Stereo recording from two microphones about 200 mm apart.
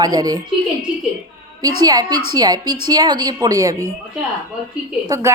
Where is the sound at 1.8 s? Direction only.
20° right (ahead or behind).